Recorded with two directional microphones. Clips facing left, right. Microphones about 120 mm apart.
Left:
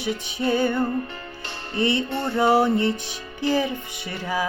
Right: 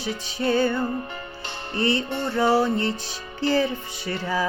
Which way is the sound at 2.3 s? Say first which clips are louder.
Left 2 dB; 20° left (ahead or behind).